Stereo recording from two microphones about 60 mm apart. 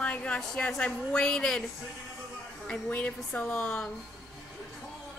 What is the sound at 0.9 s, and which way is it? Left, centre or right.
Speech, centre.